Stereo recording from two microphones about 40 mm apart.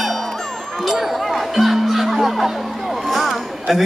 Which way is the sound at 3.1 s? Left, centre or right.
Centre.